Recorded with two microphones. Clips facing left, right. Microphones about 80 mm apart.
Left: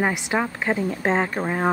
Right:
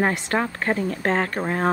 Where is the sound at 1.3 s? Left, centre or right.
Centre.